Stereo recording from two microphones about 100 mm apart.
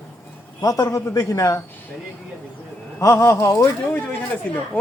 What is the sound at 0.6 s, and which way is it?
A woman's voice, 35° left (ahead or behind).